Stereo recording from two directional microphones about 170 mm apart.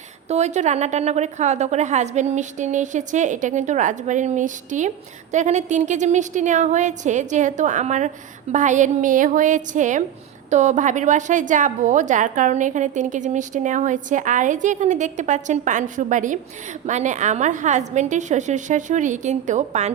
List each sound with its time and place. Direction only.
0.3 s a woman's voice: 40° right (ahead or behind)